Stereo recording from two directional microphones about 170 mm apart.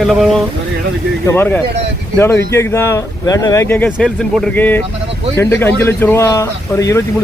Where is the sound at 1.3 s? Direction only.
10° left (ahead or behind).